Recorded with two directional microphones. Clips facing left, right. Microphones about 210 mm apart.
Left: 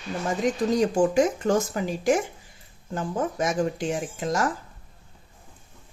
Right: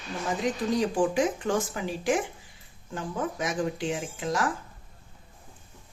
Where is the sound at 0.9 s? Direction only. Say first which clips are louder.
Left 4 dB; 40° left (ahead or behind).